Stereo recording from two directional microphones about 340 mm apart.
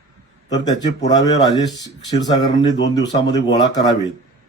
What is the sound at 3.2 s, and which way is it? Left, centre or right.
Speech, left.